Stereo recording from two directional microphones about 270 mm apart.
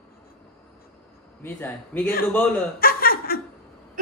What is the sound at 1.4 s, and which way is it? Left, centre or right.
Speech, centre.